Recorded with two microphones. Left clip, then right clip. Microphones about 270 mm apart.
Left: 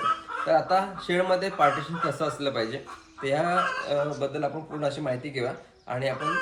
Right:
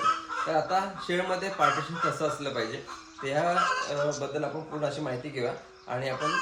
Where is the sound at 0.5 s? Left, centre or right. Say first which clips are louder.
Left 5 dB; centre.